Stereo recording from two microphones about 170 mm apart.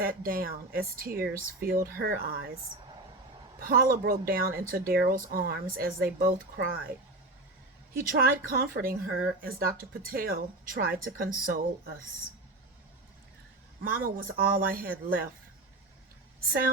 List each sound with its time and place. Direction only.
0.0 s speech: 55° right (ahead or behind)
3.6 s speech: 60° right (ahead or behind)
7.9 s speech: 60° right (ahead or behind)
13.8 s speech: 55° right (ahead or behind)